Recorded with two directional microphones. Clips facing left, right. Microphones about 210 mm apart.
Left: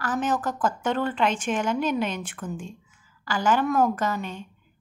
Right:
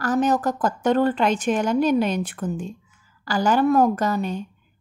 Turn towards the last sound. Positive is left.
turn(degrees=-35)  # may be behind; listen again after turning